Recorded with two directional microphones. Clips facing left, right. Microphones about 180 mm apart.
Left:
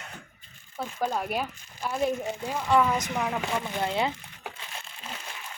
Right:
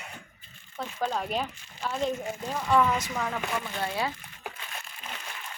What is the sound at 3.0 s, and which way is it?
Speech, 15° left (ahead or behind).